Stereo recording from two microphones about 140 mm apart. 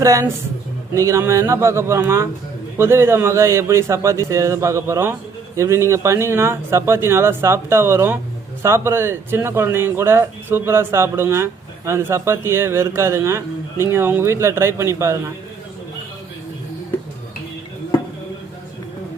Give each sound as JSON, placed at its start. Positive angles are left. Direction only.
{"t": 0.0, "sound": "a man's voice", "side_deg": -25}